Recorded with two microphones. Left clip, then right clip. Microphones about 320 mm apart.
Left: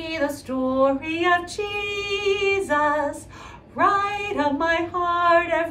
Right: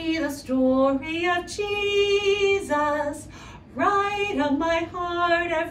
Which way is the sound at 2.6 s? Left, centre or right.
Centre.